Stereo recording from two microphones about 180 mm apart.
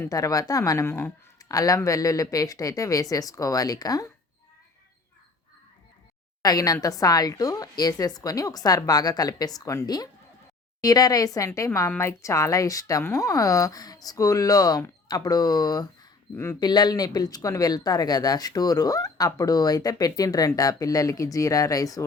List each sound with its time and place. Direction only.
0.0 s speech: 20° left (ahead or behind)
6.4 s a woman's voice: 20° left (ahead or behind)